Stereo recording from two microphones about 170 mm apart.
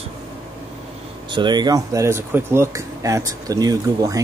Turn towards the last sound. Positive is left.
turn(degrees=-20)  # may be behind; listen again after turning